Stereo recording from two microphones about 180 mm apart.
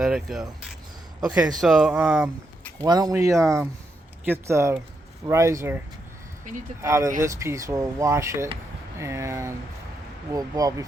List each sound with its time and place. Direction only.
0.0 s speech: 5° right (ahead or behind)
2.8 s speech: 20° right (ahead or behind)
6.8 s speech: 15° right (ahead or behind)